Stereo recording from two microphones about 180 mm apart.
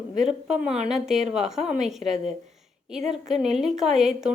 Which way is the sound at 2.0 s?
40° right (ahead or behind).